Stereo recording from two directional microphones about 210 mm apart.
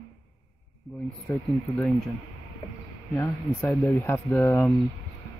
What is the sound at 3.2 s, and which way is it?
Speech, 10° left (ahead or behind).